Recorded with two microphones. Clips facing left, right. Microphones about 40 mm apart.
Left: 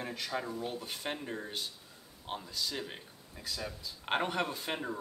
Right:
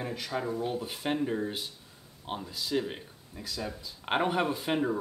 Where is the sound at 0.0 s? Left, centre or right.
Centre.